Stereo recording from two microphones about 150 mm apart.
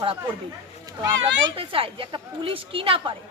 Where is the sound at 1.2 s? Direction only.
35° right (ahead or behind).